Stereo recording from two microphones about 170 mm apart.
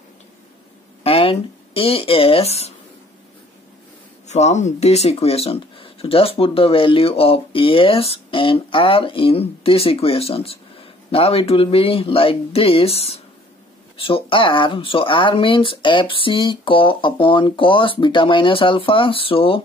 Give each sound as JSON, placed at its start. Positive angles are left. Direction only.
{"t": 1.0, "sound": "speech", "side_deg": 35}
{"t": 4.3, "sound": "speech", "side_deg": 40}